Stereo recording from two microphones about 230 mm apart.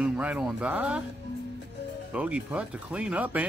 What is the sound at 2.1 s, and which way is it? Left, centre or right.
Speech, centre.